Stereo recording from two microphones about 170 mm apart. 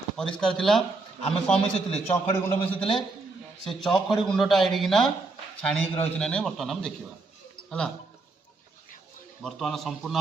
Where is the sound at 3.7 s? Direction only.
Centre (ahead or behind).